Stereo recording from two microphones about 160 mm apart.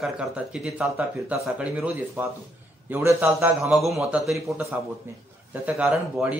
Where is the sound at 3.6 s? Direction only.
Centre (ahead or behind).